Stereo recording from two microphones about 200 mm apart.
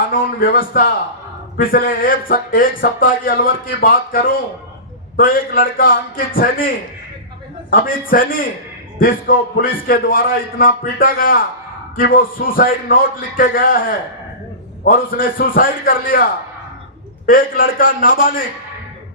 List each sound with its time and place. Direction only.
0.1 s speech: 45° left (ahead or behind)
7.7 s speech: 45° left (ahead or behind)
17.2 s speech: 45° left (ahead or behind)